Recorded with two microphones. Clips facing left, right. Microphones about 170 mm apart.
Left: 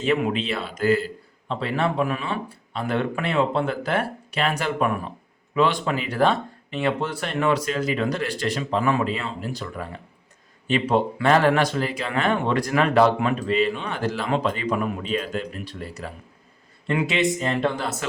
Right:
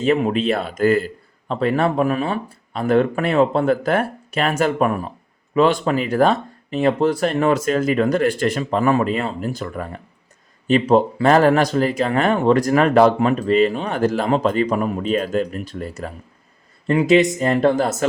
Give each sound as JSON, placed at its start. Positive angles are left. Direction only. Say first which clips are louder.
{"t": 0.0, "sound": "speech", "louder": "right 5 dB", "side_deg": -40}